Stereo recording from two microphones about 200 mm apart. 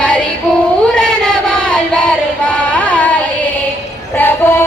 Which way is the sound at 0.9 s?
5° left (ahead or behind).